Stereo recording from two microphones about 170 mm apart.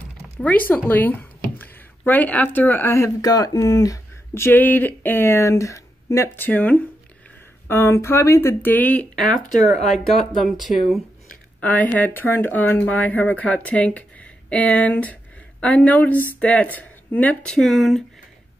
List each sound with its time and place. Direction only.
0.4 s speech: 10° left (ahead or behind)
9.4 s speech: 45° left (ahead or behind)
10.1 s speech: centre (ahead or behind)